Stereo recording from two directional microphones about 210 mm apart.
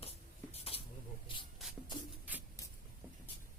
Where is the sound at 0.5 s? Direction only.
30° left (ahead or behind).